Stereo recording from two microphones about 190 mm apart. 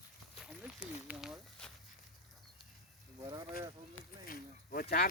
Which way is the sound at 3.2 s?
20° right (ahead or behind).